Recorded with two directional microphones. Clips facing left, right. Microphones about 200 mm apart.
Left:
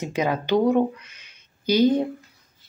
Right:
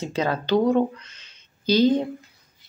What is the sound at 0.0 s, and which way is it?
Speech, 15° left (ahead or behind).